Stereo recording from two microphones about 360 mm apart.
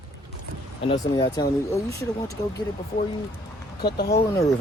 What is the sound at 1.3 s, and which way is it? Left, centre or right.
Speech, centre.